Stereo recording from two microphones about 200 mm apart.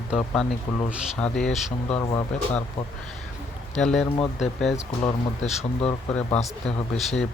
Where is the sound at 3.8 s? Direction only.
Centre (ahead or behind).